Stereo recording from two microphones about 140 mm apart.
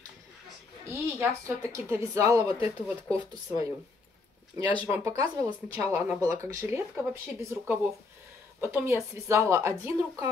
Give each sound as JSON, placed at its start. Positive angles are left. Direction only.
{"t": 0.8, "sound": "a woman's voice", "side_deg": -20}
{"t": 4.6, "sound": "speech", "side_deg": 40}
{"t": 4.9, "sound": "a woman's voice", "side_deg": -20}